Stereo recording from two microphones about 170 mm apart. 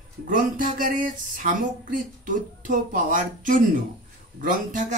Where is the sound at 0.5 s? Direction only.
50° right (ahead or behind).